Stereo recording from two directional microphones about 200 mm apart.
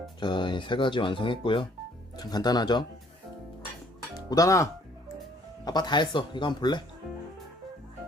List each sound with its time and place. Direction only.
0.2 s speech: 25° left (ahead or behind)
4.3 s speech: 15° left (ahead or behind)